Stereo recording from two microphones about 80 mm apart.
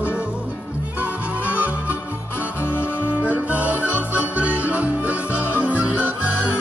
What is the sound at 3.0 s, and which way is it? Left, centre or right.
Music, centre.